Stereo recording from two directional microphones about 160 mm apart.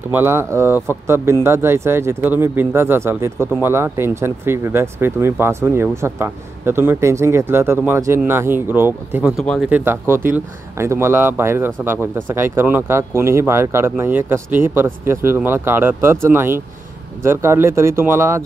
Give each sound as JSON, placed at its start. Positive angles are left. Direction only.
{"t": 0.1, "sound": "speech", "side_deg": -15}
{"t": 9.4, "sound": "speech", "side_deg": 0}
{"t": 9.7, "sound": "speech", "side_deg": -10}